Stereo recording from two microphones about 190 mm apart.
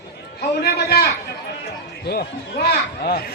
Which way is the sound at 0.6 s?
55° left (ahead or behind).